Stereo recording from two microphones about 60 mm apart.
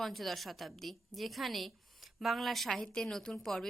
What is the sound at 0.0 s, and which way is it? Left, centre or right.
A woman's voice, centre.